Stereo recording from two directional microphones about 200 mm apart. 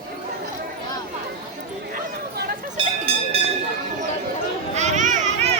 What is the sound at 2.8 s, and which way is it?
Cowbell, 25° right (ahead or behind).